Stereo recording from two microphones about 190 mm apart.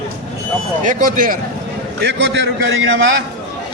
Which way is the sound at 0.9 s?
45° right (ahead or behind).